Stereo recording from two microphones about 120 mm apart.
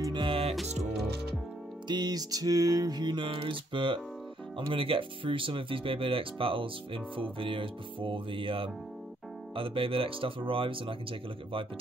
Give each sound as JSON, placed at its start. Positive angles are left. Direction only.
{"t": 0.0, "sound": "music", "side_deg": -45}
{"t": 1.9, "sound": "music", "side_deg": -35}
{"t": 4.6, "sound": "speech", "side_deg": -50}